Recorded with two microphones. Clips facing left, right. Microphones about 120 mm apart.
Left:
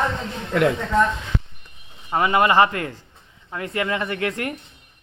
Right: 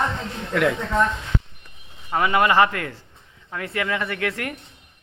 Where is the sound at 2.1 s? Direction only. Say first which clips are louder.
Left 1 dB; 25° left (ahead or behind).